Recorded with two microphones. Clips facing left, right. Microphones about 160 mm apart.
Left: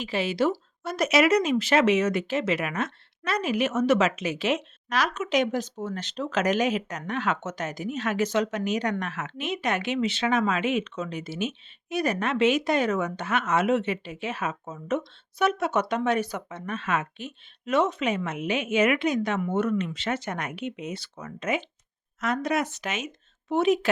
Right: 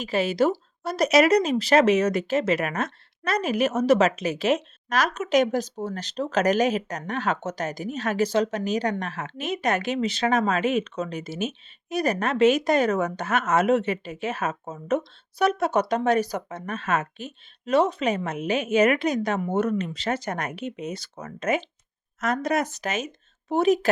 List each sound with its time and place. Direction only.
0.0 s speech: 45° right (ahead or behind)